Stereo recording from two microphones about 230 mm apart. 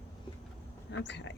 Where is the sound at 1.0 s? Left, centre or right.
Left.